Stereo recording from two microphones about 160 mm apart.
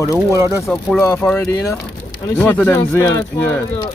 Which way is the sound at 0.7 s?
Centre (ahead or behind).